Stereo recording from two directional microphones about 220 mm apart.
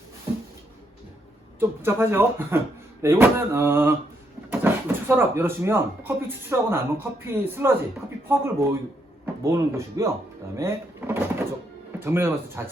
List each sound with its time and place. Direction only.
1.5 s speech: 10° right (ahead or behind)
9.2 s speech: 15° right (ahead or behind)
10.6 s a sound: 10° right (ahead or behind)
11.9 s speech: 10° right (ahead or behind)